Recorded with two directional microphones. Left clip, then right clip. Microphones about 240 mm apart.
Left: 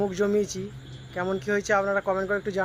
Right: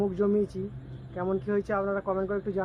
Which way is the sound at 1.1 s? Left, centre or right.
Centre.